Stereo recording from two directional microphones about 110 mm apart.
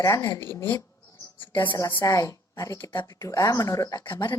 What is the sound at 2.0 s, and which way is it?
A woman's voice, 30° left (ahead or behind).